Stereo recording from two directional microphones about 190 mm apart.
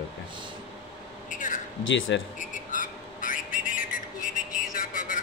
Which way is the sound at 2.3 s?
45° left (ahead or behind).